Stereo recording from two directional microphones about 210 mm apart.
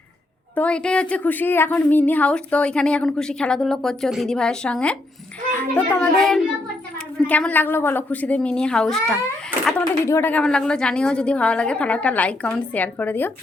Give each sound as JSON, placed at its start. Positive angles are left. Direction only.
{"t": 0.5, "sound": "a woman's voice", "side_deg": 5}